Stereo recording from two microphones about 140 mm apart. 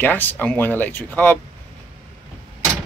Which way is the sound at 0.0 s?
15° left (ahead or behind).